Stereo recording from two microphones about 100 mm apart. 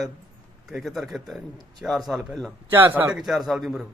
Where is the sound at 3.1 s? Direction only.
5° right (ahead or behind).